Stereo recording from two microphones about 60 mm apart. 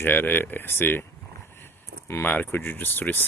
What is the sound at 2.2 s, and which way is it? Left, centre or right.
Speech, left.